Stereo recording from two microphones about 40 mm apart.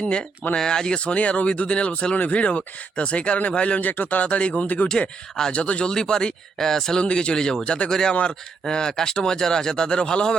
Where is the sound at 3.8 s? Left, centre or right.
Left.